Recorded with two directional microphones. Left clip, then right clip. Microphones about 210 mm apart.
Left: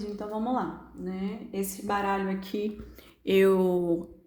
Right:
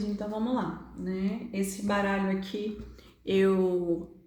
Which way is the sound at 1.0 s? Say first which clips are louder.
Right 2 dB; 40° left (ahead or behind).